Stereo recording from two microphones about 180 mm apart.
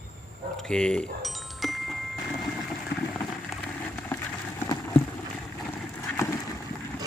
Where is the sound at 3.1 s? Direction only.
10° left (ahead or behind).